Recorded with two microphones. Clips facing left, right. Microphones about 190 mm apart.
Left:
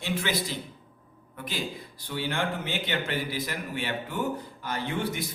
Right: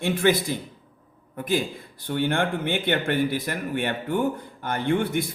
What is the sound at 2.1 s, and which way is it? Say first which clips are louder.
Speech: right 6 dB; 55° right (ahead or behind).